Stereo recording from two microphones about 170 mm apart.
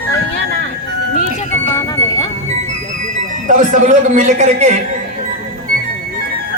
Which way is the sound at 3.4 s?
50° right (ahead or behind).